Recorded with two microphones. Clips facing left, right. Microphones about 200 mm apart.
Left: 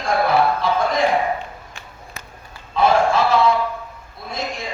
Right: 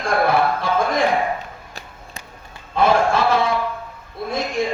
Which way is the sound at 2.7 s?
55° right (ahead or behind).